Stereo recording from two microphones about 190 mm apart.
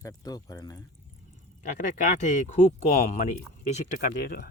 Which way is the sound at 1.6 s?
40° left (ahead or behind).